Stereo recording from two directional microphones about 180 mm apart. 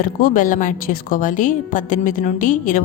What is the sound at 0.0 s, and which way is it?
A woman's voice, 50° left (ahead or behind).